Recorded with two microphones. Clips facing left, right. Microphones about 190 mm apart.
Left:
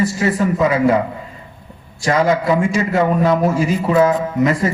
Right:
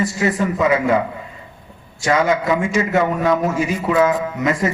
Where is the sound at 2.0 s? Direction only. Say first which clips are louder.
Left 2 dB; 35° left (ahead or behind).